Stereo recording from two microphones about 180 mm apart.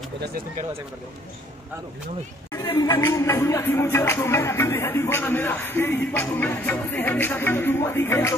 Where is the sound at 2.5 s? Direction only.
20° left (ahead or behind).